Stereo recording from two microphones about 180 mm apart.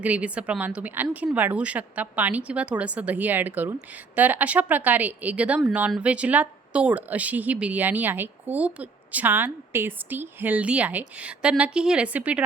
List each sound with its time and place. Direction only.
0.0 s a woman's voice: 10° right (ahead or behind)